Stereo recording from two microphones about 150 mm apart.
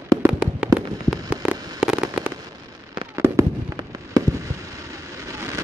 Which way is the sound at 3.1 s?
20° right (ahead or behind).